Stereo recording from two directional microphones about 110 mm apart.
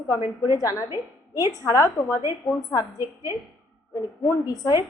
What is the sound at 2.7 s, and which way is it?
A woman's voice, 35° left (ahead or behind).